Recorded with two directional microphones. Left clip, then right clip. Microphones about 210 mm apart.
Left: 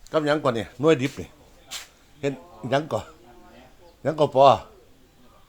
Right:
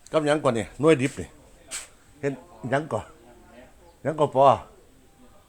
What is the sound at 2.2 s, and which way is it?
Speech, 5° left (ahead or behind).